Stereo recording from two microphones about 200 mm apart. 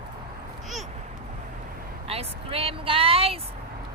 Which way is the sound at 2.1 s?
30° right (ahead or behind).